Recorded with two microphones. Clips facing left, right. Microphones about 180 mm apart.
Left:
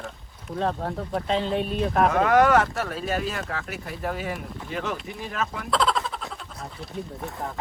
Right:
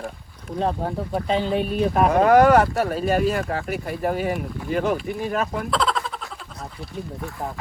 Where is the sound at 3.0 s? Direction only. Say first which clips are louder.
Right 7 dB; 55° right (ahead or behind).